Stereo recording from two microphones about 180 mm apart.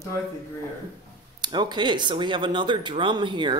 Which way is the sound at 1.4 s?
25° right (ahead or behind).